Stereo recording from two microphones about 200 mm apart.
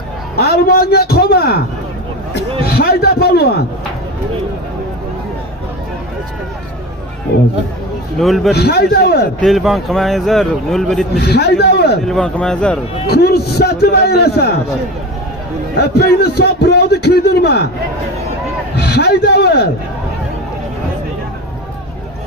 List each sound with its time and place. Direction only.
0.4 s a man's voice: 50° left (ahead or behind)
2.7 s a man's voice: 50° left (ahead or behind)
7.3 s a man's voice: 55° left (ahead or behind)
8.2 s speech: centre (ahead or behind)
8.5 s a man's voice: 50° left (ahead or behind)
9.4 s speech: centre (ahead or behind)
11.1 s a man's voice: 55° left (ahead or behind)
12.0 s speech: 5° left (ahead or behind)
13.0 s a man's voice: 50° left (ahead or behind)
15.8 s a man's voice: 55° left (ahead or behind)
18.8 s a man's voice: 55° left (ahead or behind)